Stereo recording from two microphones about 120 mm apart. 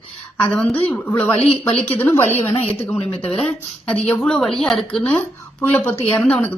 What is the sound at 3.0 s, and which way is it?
Speech, 55° left (ahead or behind).